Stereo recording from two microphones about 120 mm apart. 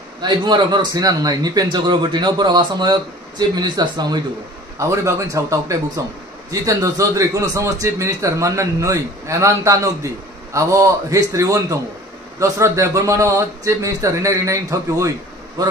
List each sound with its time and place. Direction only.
0.2 s a man's voice: 40° right (ahead or behind)